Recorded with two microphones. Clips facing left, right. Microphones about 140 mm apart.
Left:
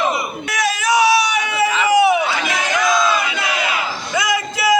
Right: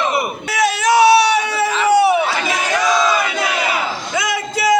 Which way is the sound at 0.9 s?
30° right (ahead or behind).